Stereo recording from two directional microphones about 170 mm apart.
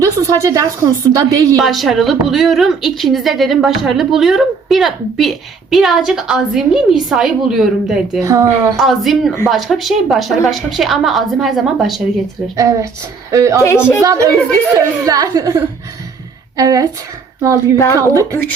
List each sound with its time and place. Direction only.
0.0 s a woman's voice: 20° right (ahead or behind)
1.5 s a woman's voice: centre (ahead or behind)
8.2 s a woman's voice: 20° right (ahead or behind)
8.8 s a woman's voice: centre (ahead or behind)
12.5 s a woman's voice: 20° right (ahead or behind)
13.6 s a woman's voice: 15° left (ahead or behind)
14.0 s a woman's voice: 20° right (ahead or behind)
17.9 s a woman's voice: 20° right (ahead or behind)